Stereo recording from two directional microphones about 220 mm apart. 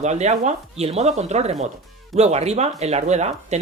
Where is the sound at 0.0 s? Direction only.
30° right (ahead or behind).